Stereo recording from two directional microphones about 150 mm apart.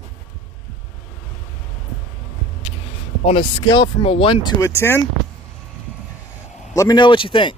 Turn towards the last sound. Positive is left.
turn(degrees=35)  # may be behind; listen again after turning